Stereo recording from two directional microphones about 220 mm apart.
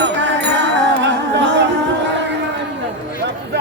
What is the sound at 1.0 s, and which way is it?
Music, 55° right (ahead or behind).